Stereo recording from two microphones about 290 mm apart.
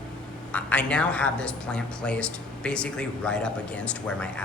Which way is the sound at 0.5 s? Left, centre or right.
Centre.